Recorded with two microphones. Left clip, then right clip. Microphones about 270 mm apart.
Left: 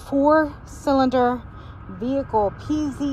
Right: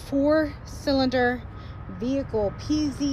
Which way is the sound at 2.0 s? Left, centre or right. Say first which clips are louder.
Left 5 dB; centre.